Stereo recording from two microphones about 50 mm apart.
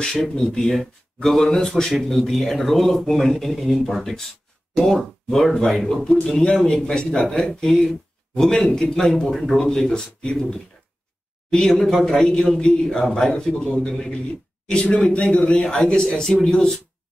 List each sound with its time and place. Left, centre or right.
0.0 s speech: centre